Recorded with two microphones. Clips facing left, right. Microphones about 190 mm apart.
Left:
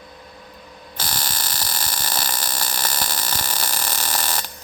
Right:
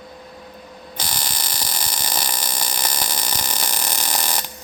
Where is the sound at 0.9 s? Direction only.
15° right (ahead or behind).